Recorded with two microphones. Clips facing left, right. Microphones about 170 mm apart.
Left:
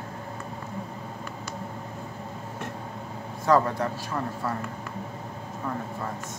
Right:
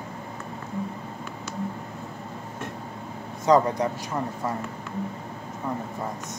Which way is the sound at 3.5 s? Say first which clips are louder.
Right 2 dB; 20° right (ahead or behind).